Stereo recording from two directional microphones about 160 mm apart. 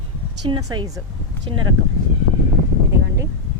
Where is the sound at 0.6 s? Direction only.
20° right (ahead or behind).